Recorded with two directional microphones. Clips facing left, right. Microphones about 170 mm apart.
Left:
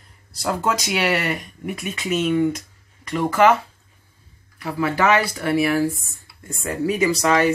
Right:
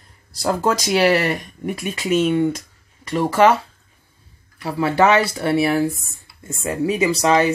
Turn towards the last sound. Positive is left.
turn(degrees=-25)  # may be behind; listen again after turning